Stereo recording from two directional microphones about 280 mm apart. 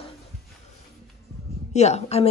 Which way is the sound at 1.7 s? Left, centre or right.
Left.